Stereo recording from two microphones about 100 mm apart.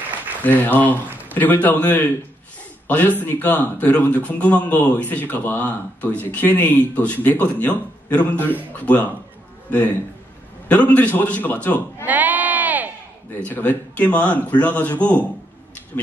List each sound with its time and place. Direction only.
0.4 s a man's voice: 15° left (ahead or behind)
12.1 s sheep: 15° right (ahead or behind)
13.4 s a man's voice: 15° left (ahead or behind)